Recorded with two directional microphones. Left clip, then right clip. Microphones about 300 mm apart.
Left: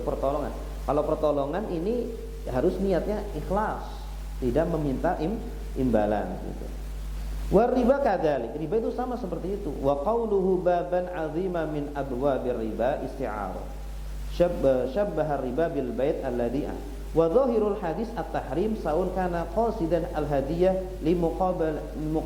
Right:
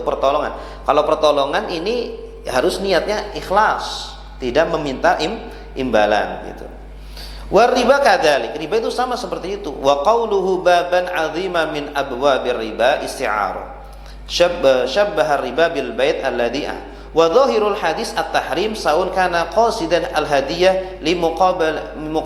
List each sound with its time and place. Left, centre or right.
0.0 s a man's voice: right; by 6.3 s centre
7.5 s a man's voice: centre
10.2 s a man's voice: right
10.7 s a man's voice: centre
18.9 s a man's voice: centre
19.2 s a man's voice: centre
19.5 s a man's voice: centre
21.2 s a man's voice: right
21.6 s a man's voice: centre